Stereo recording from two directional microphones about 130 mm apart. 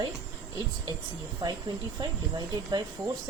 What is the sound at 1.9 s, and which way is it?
Speech, 30° right (ahead or behind).